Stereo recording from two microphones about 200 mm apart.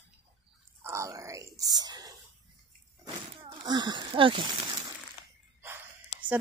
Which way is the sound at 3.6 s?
20° right (ahead or behind).